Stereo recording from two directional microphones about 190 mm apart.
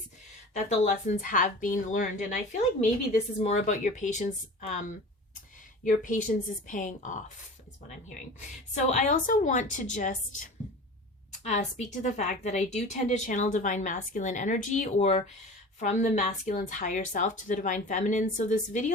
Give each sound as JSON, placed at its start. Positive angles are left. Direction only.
{"t": 0.5, "sound": "a woman's voice", "side_deg": 35}
{"t": 8.7, "sound": "a woman's voice", "side_deg": 40}
{"t": 11.4, "sound": "a woman's voice", "side_deg": 40}